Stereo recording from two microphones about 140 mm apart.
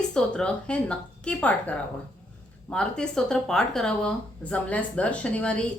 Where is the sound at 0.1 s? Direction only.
5° left (ahead or behind).